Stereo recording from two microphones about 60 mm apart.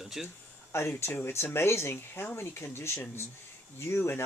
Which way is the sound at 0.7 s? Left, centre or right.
Left.